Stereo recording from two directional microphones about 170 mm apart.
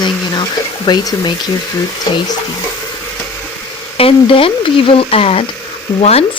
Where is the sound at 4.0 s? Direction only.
35° left (ahead or behind).